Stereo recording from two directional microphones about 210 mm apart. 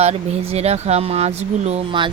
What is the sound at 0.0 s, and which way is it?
A woman's voice, 30° right (ahead or behind).